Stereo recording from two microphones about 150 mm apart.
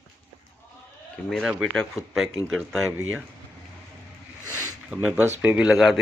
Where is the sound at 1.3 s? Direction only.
5° right (ahead or behind).